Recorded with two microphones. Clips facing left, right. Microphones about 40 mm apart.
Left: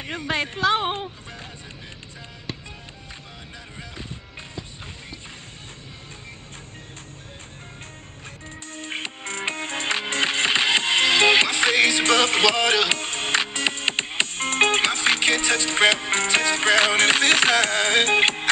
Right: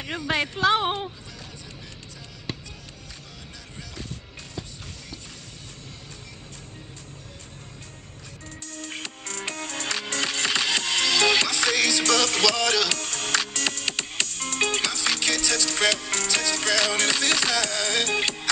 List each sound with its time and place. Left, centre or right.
0.3 s speech: centre
2.5 s music: centre
3.7 s music: left
8.8 s music: left